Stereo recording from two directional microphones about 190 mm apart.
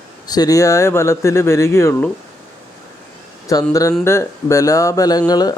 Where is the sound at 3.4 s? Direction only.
20° left (ahead or behind).